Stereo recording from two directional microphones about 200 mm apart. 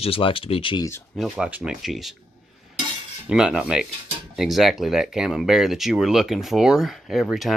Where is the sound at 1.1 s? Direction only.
Centre (ahead or behind).